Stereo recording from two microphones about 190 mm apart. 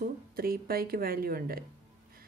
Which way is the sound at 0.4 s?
50° right (ahead or behind).